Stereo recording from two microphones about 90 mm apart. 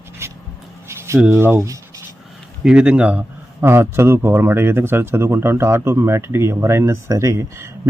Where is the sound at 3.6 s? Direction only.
25° right (ahead or behind).